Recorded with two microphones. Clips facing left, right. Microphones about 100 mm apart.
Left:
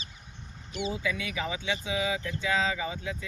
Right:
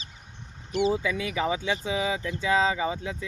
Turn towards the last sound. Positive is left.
turn(degrees=-30)  # may be behind; listen again after turning